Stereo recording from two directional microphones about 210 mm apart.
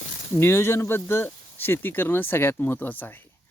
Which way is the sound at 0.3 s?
10° left (ahead or behind).